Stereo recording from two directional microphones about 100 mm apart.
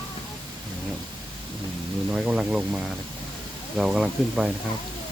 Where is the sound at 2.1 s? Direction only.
10° right (ahead or behind).